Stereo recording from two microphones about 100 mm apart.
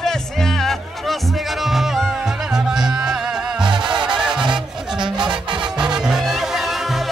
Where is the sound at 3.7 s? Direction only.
50° right (ahead or behind).